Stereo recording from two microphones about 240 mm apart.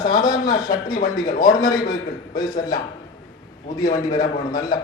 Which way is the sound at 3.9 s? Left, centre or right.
Centre.